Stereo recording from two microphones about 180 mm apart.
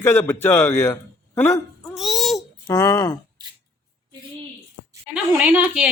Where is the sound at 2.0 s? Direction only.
Centre (ahead or behind).